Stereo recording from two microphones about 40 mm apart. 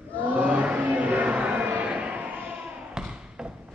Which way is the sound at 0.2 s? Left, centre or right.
Right.